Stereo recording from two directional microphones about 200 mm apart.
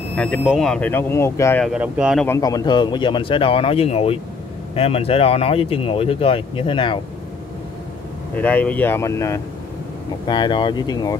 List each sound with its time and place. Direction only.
0.1 s speech: 5° left (ahead or behind)
1.7 s speech: 5° right (ahead or behind)
2.2 s speech: 15° left (ahead or behind)
8.4 s speech: 10° left (ahead or behind)